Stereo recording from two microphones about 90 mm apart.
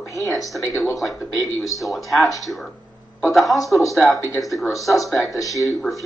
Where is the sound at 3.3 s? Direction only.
Centre (ahead or behind).